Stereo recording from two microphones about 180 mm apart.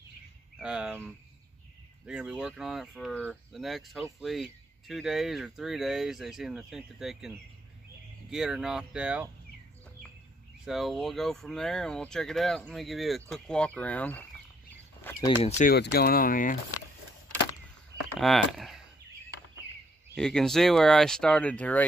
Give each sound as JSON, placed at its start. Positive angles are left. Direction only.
{"t": 0.6, "sound": "speech", "side_deg": -5}
{"t": 2.0, "sound": "speech", "side_deg": -5}
{"t": 10.6, "sound": "speech", "side_deg": 0}
{"t": 15.4, "sound": "speech", "side_deg": 40}
{"t": 15.7, "sound": "speech", "side_deg": 60}
{"t": 18.2, "sound": "speech", "side_deg": 0}
{"t": 20.2, "sound": "speech", "side_deg": 5}